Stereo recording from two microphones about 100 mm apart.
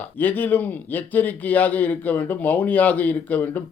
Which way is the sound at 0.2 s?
15° left (ahead or behind).